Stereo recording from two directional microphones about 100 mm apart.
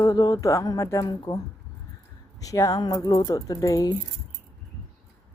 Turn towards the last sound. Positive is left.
turn(degrees=35)  # may be behind; listen again after turning